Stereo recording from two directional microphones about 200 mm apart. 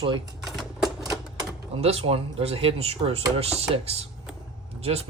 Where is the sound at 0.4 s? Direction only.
Centre (ahead or behind).